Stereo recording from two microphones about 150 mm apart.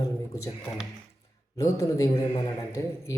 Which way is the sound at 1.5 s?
20° left (ahead or behind).